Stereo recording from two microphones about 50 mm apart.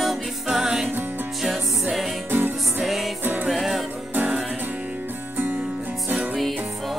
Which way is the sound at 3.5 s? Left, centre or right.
Centre.